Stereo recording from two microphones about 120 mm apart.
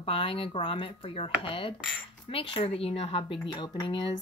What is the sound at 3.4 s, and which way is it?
Speech, 35° left (ahead or behind).